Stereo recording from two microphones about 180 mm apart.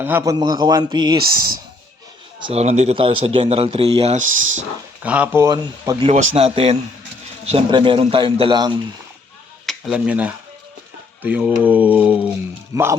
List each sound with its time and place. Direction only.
0.0 s a man's voice: 15° right (ahead or behind)
2.4 s speech: 35° right (ahead or behind)
5.0 s speech: 10° right (ahead or behind)
6.1 s a man's voice: 30° right (ahead or behind)
9.6 s speech: centre (ahead or behind)